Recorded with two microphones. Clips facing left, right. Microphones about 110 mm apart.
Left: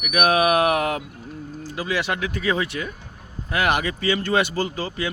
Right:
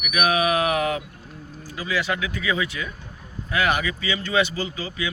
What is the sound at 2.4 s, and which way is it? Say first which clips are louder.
Speech: left 4 dB; 40° left (ahead or behind).